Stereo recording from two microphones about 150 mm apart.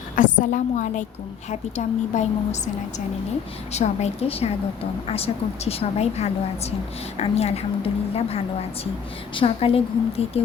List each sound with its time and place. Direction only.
0.2 s a woman's voice: 60° left (ahead or behind)
3.7 s a woman's voice: 45° left (ahead or behind)